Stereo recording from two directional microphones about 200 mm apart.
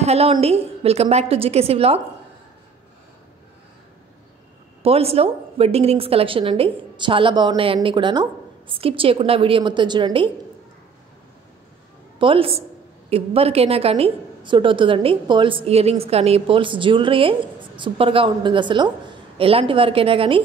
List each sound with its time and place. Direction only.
0.0 s a woman's voice: 30° right (ahead or behind)
4.8 s a woman's voice: 30° right (ahead or behind)
12.2 s a woman's voice: 25° right (ahead or behind)